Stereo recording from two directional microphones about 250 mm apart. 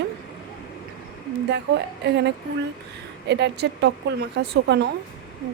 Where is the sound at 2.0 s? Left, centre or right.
Right.